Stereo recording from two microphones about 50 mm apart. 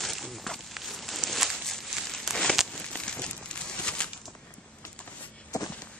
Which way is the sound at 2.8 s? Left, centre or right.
Centre.